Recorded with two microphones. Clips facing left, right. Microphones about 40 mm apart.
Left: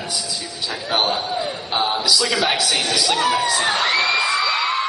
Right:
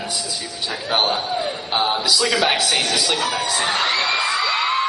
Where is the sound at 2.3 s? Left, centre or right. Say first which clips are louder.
Right 1 dB; centre.